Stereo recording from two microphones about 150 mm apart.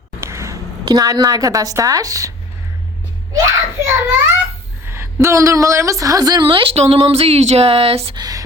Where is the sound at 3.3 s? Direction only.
20° right (ahead or behind); by 8.2 s 40° right (ahead or behind).